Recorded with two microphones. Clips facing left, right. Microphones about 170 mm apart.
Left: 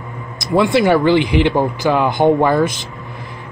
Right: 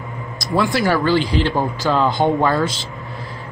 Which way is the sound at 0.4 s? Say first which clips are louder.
Left 5 dB; 20° left (ahead or behind).